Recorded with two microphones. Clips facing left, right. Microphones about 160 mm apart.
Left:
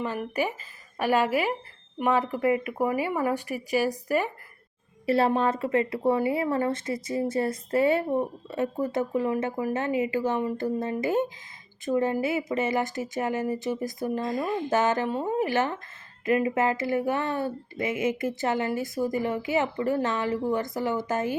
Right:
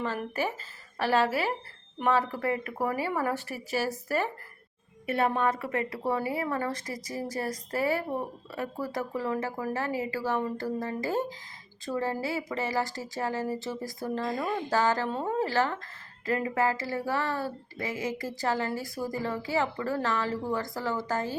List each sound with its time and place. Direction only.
0.0 s speech: 15° left (ahead or behind)
5.0 s speech: 30° left (ahead or behind)